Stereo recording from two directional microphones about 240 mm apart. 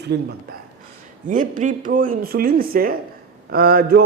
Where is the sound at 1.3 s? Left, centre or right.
Right.